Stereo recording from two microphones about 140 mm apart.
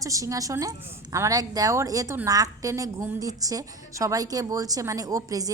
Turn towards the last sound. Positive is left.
turn(degrees=-25)  # may be behind; listen again after turning